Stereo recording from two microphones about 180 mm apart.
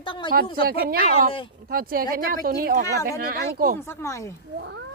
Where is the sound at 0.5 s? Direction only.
55° right (ahead or behind).